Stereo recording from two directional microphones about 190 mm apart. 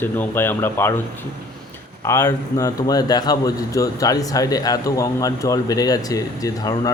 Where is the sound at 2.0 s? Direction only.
15° left (ahead or behind).